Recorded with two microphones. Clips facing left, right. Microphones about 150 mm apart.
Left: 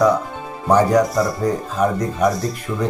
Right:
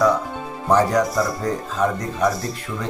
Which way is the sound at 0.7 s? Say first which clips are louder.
Left 3 dB; 10° left (ahead or behind).